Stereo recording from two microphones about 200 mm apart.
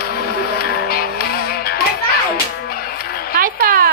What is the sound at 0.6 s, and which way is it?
Music, 50° left (ahead or behind).